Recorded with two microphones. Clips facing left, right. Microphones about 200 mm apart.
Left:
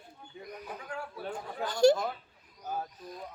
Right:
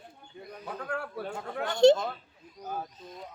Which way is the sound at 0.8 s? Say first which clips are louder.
Right 8 dB; 60° right (ahead or behind).